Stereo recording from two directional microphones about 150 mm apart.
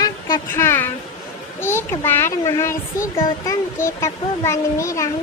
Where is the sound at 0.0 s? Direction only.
25° left (ahead or behind).